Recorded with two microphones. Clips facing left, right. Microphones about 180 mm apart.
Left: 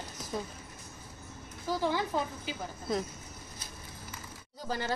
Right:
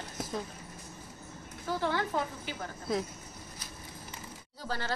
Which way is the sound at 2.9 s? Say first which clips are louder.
Even; centre (ahead or behind).